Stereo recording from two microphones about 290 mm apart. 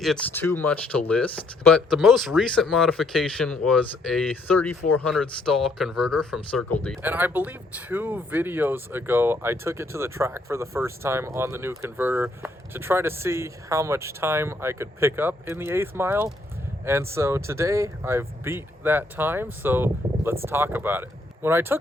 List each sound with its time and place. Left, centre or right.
0.0 s speech: centre